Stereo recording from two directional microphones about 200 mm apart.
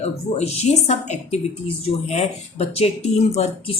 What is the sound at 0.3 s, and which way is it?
Speech, 30° left (ahead or behind).